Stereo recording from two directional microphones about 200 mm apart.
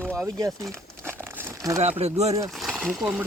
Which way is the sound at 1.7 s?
30° right (ahead or behind).